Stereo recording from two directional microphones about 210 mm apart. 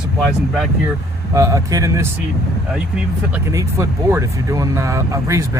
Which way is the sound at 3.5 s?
15° right (ahead or behind).